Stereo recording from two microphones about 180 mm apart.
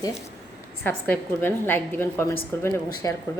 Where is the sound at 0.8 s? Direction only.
10° left (ahead or behind).